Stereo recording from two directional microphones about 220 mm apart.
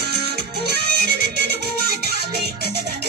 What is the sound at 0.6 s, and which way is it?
Music, 45° right (ahead or behind).